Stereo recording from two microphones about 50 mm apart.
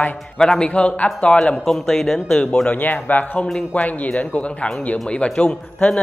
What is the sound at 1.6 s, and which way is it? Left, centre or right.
A man's voice, centre.